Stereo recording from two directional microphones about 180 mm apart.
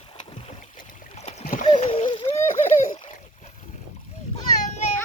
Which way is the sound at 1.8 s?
40° left (ahead or behind).